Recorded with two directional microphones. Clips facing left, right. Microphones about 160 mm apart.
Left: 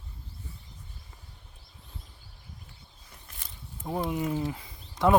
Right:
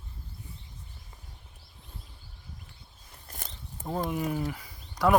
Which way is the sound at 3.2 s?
40° right (ahead or behind).